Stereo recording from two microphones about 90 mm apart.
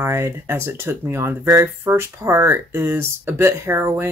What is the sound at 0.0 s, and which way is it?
Speech, 30° right (ahead or behind).